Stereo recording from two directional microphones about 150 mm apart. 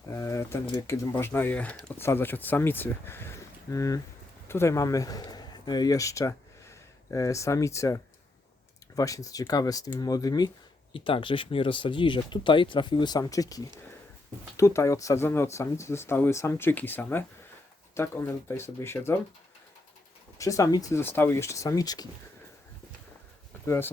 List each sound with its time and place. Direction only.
0.1 s speech: 20° left (ahead or behind)
20.4 s speech: 20° left (ahead or behind)
23.6 s speech: 15° left (ahead or behind)